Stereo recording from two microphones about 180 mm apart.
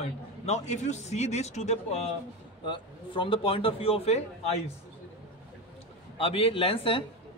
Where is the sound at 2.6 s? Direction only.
25° left (ahead or behind).